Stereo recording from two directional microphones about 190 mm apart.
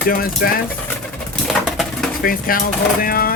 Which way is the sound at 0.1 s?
50° left (ahead or behind).